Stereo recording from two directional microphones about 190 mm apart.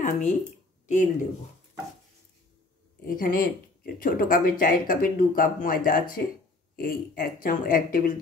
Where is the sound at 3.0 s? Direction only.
45° left (ahead or behind).